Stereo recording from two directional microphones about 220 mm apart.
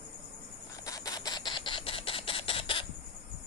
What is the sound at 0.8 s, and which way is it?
Camera, 15° left (ahead or behind).